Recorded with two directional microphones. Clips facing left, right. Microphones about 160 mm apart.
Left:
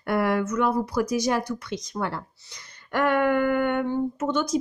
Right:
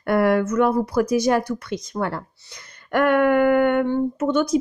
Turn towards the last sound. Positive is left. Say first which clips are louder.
# right 5 dB
turn(degrees=-55)  # may be behind; listen again after turning